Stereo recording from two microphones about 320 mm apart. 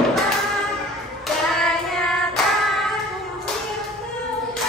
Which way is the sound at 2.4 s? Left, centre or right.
Centre.